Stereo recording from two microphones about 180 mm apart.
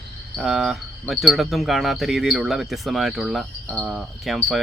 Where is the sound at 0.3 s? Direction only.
Centre (ahead or behind).